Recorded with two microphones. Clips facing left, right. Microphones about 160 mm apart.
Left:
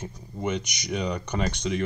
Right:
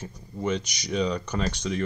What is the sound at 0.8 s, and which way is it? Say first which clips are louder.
Speech: right 3 dB; 10° left (ahead or behind).